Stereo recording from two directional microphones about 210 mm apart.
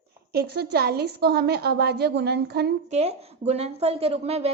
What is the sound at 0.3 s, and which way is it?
A woman's voice, 50° right (ahead or behind).